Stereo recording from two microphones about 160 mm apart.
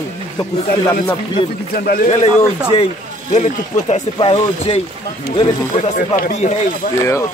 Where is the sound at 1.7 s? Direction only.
70° left (ahead or behind).